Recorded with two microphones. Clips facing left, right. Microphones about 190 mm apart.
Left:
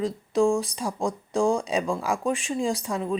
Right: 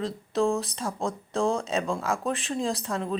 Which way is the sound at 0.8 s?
Centre (ahead or behind).